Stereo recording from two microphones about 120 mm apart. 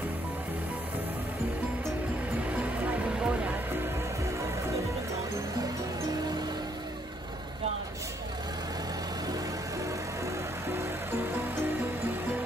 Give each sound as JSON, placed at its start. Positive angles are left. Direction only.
{"t": 2.5, "sound": "music", "side_deg": -15}